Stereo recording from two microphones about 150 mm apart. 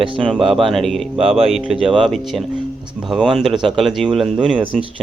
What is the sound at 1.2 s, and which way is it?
Speech, 40° right (ahead or behind).